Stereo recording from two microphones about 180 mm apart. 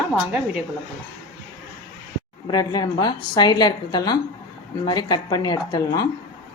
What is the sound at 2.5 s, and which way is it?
A woman's voice, 20° left (ahead or behind).